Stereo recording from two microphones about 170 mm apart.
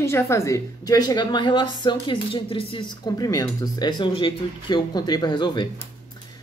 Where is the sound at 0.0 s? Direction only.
15° left (ahead or behind).